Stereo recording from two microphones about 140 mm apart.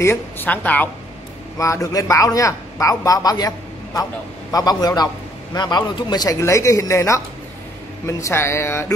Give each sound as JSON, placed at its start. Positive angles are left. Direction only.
{"t": 0.0, "sound": "a woman's voice", "side_deg": 15}
{"t": 1.6, "sound": "a man's voice", "side_deg": 20}